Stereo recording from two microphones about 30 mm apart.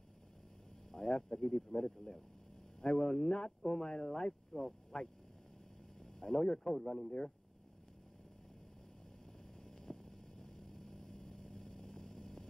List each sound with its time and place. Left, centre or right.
0.9 s speech: centre
4.5 s speech: left
4.9 s speech: left
5.9 s a sound: centre
6.4 s speech: left
6.7 s speech: centre
7.1 s speech: left
9.7 s vehicle: centre